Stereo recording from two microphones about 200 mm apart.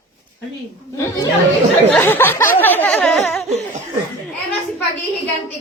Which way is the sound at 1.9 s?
10° left (ahead or behind).